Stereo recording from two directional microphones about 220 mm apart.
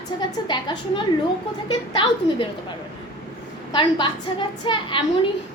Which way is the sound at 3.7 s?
20° left (ahead or behind).